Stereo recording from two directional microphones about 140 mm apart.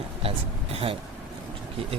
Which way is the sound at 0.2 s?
45° right (ahead or behind).